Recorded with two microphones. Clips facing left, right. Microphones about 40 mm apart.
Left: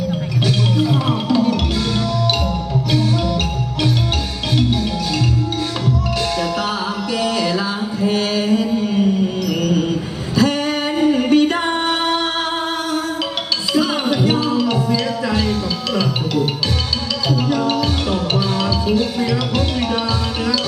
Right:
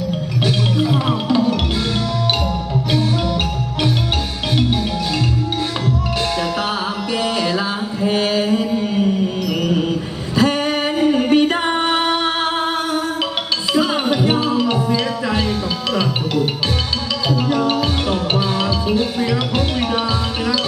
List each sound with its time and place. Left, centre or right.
0.4 s music: right
6.4 s music: right
8.0 s mantra: right
10.3 s music: right